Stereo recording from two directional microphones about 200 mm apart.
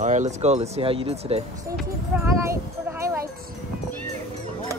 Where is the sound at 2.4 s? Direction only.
15° right (ahead or behind).